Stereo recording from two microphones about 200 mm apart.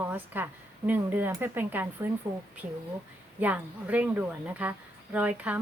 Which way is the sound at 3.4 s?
10° right (ahead or behind).